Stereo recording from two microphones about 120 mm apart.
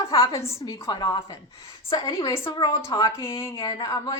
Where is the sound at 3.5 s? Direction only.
45° left (ahead or behind).